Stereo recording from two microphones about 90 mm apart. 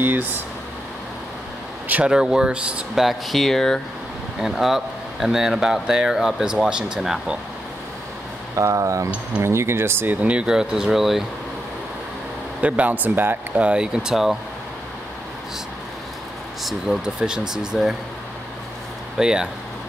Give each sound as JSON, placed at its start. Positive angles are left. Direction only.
{"t": 0.0, "sound": "speech", "side_deg": -20}
{"t": 1.9, "sound": "speech", "side_deg": -15}
{"t": 8.5, "sound": "speech", "side_deg": -35}
{"t": 10.2, "sound": "speech", "side_deg": -10}
{"t": 12.6, "sound": "speech", "side_deg": -15}
{"t": 16.6, "sound": "speech", "side_deg": -5}
{"t": 19.1, "sound": "speech", "side_deg": -10}